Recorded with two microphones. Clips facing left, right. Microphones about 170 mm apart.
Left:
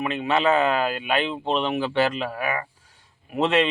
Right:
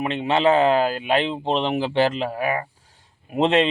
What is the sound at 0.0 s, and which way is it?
Speech, 30° right (ahead or behind).